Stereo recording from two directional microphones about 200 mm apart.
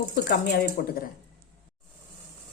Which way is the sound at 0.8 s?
50° left (ahead or behind).